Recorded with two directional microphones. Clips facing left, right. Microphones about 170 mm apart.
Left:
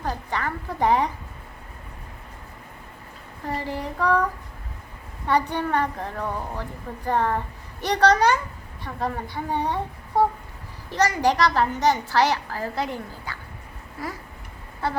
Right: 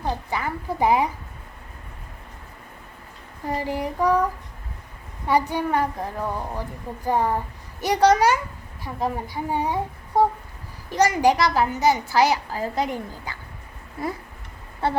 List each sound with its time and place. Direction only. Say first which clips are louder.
0.3 s a woman's voice: right 1 dB; 10° right (ahead or behind)
3.6 s a woman's voice: right 4 dB; 15° right (ahead or behind)
5.3 s a woman's voice: right 1 dB; 10° right (ahead or behind)